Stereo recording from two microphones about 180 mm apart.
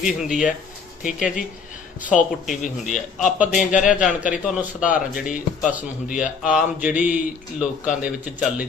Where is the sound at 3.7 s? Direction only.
45° left (ahead or behind).